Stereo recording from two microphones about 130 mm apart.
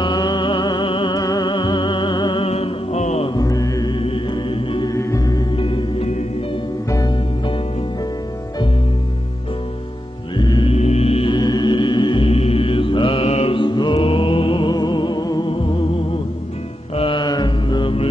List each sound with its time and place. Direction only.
0.0 s music: 35° left (ahead or behind); by 3.3 s 60° left (ahead or behind)
3.3 s music: 25° left (ahead or behind)
4.8 s music: 25° left (ahead or behind)
5.6 s music: 45° left (ahead or behind)
6.9 s music: 25° left (ahead or behind)
10.3 s music: 35° left (ahead or behind)
10.7 s music: 55° left (ahead or behind); by 12.3 s 35° left (ahead or behind)
12.3 s mantra: 50° left (ahead or behind); by 15.5 s 30° left (ahead or behind)
16.9 s mantra: 40° left (ahead or behind)